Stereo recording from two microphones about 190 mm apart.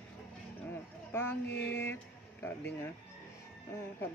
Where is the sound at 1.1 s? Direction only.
10° left (ahead or behind).